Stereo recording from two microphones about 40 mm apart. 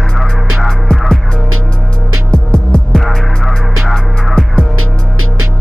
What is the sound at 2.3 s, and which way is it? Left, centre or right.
Music, left.